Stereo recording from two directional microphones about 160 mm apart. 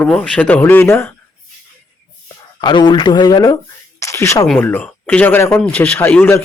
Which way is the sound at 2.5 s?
30° left (ahead or behind).